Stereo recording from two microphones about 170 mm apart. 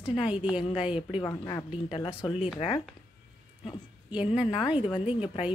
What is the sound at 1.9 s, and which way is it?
Speech, 30° left (ahead or behind).